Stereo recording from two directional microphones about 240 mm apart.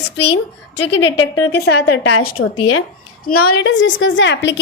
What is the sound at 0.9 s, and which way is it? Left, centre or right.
Speech, left.